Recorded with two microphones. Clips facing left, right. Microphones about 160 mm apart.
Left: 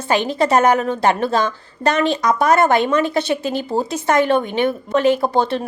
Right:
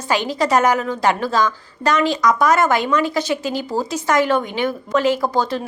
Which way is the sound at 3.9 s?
55° left (ahead or behind).